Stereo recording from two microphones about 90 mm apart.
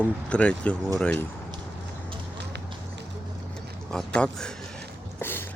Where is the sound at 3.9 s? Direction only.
10° left (ahead or behind).